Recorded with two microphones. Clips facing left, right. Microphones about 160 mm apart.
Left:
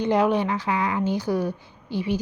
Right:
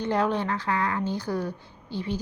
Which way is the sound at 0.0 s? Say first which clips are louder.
Left 5 dB; 15° left (ahead or behind).